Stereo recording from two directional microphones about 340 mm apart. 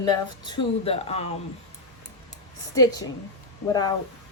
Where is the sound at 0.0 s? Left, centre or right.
Centre.